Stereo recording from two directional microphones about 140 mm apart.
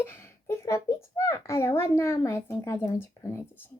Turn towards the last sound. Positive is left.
turn(degrees=15)  # may be behind; listen again after turning